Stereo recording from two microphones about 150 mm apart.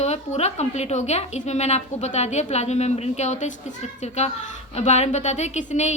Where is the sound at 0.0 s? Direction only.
45° left (ahead or behind).